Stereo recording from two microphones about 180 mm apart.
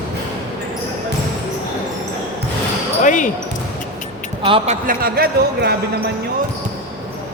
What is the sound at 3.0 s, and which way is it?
Speech, 45° left (ahead or behind).